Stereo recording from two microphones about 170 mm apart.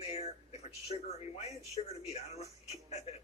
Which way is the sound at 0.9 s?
40° left (ahead or behind).